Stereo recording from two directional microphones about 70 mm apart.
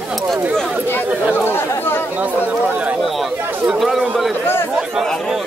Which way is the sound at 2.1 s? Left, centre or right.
Right.